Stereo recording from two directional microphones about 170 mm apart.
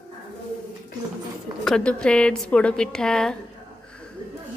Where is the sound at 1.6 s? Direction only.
5° left (ahead or behind).